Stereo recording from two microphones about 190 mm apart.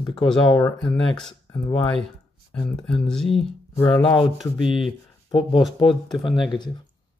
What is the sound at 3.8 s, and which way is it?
Speech, 25° left (ahead or behind).